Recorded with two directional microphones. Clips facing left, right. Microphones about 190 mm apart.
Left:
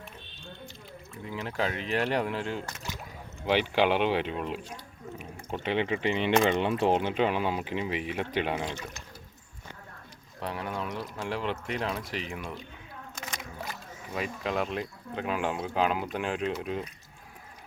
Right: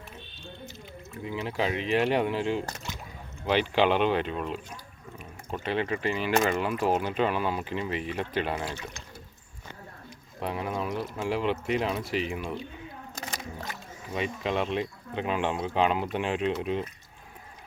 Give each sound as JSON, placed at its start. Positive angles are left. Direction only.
{"t": 1.1, "sound": "speech", "side_deg": 0}
{"t": 3.4, "sound": "speech", "side_deg": 10}
{"t": 10.4, "sound": "speech", "side_deg": -5}
{"t": 13.1, "sound": "a sound", "side_deg": -35}
{"t": 13.6, "sound": "speech", "side_deg": 5}